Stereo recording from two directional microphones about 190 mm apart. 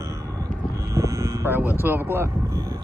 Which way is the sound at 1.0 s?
15° right (ahead or behind).